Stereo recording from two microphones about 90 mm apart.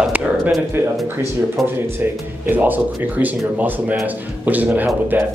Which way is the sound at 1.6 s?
Centre (ahead or behind).